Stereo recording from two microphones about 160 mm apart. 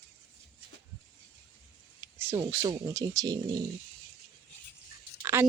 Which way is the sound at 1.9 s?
15° right (ahead or behind).